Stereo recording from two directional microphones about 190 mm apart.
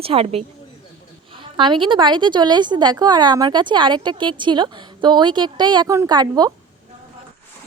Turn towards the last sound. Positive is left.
turn(degrees=-20)  # may be behind; listen again after turning